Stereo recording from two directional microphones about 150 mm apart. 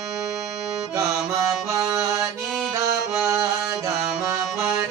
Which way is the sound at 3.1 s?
15° right (ahead or behind).